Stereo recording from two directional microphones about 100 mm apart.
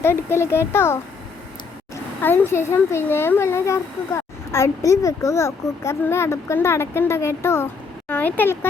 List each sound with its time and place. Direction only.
0.0 s speech: 25° left (ahead or behind)
2.2 s speech: 20° left (ahead or behind)